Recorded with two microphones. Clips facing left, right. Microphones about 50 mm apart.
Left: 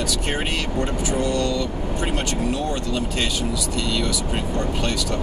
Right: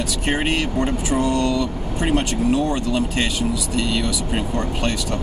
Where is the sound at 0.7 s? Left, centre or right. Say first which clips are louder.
Right 3 dB; centre.